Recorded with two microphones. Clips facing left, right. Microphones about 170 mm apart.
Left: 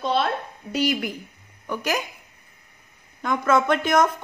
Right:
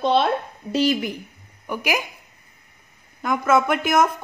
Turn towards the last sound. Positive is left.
turn(degrees=-5)  # may be behind; listen again after turning